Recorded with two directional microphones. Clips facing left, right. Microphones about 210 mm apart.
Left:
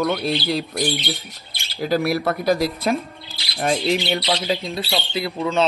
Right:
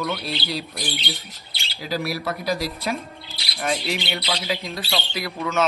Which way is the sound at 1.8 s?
50° left (ahead or behind).